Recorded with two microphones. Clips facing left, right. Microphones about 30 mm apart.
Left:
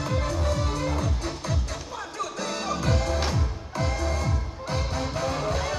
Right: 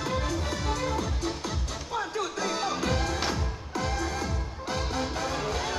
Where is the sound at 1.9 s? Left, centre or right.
Right.